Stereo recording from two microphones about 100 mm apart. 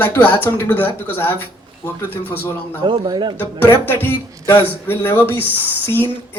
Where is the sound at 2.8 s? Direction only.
50° right (ahead or behind).